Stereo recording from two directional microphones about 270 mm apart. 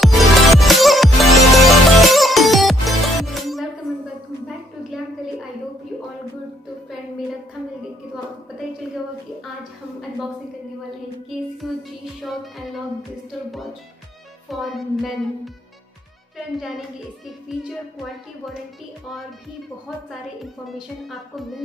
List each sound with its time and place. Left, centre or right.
0.0 s music: centre
12.2 s music: centre
14.5 s music: centre
17.5 s music: centre
20.6 s music: centre